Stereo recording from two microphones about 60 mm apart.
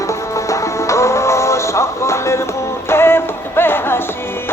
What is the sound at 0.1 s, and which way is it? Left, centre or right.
Music, left.